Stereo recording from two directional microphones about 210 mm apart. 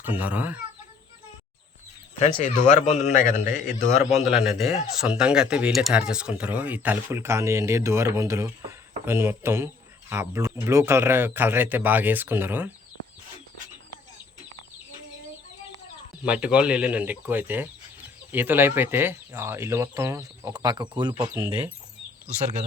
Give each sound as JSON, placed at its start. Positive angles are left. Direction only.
{"t": 0.0, "sound": "speech", "side_deg": -10}
{"t": 2.4, "sound": "a man's voice", "side_deg": 35}
{"t": 4.2, "sound": "speech", "side_deg": 0}
{"t": 16.2, "sound": "speech", "side_deg": -5}